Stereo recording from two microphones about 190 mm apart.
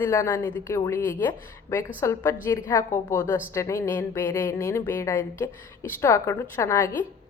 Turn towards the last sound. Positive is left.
turn(degrees=15)  # may be behind; listen again after turning